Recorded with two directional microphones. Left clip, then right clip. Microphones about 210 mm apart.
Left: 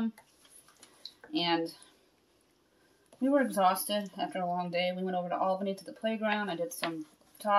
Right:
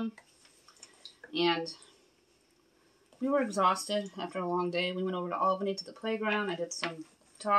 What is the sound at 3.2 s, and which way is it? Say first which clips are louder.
Speech: left 1 dB; 5° right (ahead or behind).